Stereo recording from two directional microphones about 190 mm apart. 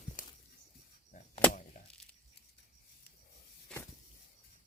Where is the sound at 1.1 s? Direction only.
45° left (ahead or behind).